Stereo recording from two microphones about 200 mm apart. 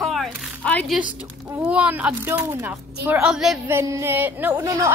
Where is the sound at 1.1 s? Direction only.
5° right (ahead or behind).